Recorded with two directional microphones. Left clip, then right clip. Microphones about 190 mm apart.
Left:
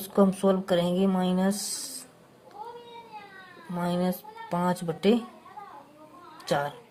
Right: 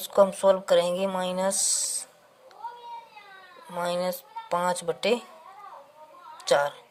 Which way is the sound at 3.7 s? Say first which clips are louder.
Right 2 dB; 25° right (ahead or behind).